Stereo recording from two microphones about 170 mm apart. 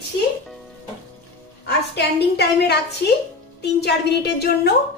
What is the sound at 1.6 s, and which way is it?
A woman's voice, 75° left (ahead or behind).